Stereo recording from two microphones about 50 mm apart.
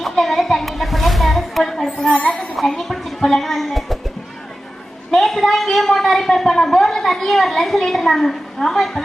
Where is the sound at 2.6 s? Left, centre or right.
Centre.